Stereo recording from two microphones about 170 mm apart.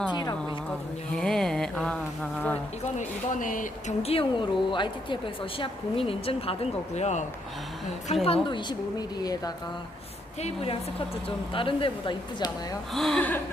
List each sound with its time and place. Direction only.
0.1 s speech: 25° left (ahead or behind)
1.1 s a sound: 5° left (ahead or behind)
2.8 s a woman's voice: 45° left (ahead or behind)
4.0 s a woman's voice: 35° left (ahead or behind)
10.4 s a woman's voice: 35° left (ahead or behind)
12.9 s a sound: centre (ahead or behind)